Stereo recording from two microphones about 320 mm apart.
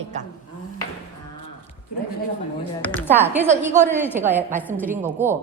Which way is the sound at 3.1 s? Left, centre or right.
Centre.